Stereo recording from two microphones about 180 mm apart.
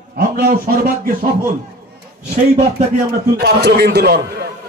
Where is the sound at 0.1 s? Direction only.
55° right (ahead or behind).